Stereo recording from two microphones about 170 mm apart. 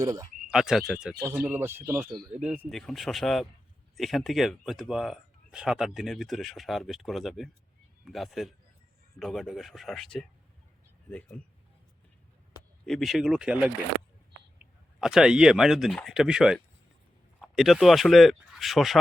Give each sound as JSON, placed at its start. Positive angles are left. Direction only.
{"t": 0.0, "sound": "speech", "side_deg": -20}
{"t": 0.5, "sound": "speech", "side_deg": -5}
{"t": 2.6, "sound": "speech", "side_deg": 0}
{"t": 12.8, "sound": "speech", "side_deg": 0}